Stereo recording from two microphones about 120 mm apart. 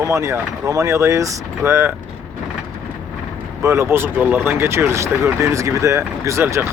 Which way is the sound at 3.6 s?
25° right (ahead or behind).